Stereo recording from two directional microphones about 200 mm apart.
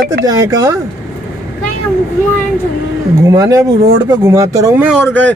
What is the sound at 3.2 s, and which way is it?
Speech, 15° right (ahead or behind).